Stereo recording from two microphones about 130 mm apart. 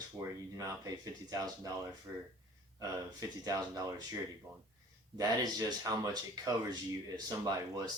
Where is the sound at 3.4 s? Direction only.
30° right (ahead or behind).